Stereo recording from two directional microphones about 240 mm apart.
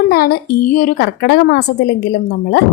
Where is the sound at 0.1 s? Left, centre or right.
Left.